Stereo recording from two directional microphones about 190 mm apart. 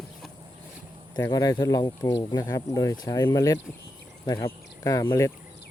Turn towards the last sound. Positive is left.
turn(degrees=15)  # may be behind; listen again after turning